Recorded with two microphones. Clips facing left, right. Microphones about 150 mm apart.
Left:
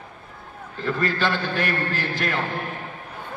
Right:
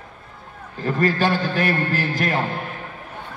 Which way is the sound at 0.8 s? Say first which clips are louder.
Right 4 dB; 40° right (ahead or behind).